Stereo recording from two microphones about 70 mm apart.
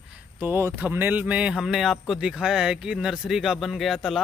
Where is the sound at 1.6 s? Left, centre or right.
Centre.